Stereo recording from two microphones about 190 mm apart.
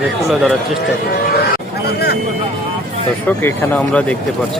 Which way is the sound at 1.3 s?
55° left (ahead or behind).